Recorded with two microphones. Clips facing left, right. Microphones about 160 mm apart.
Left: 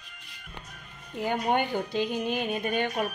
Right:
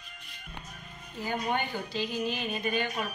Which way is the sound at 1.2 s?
60° left (ahead or behind).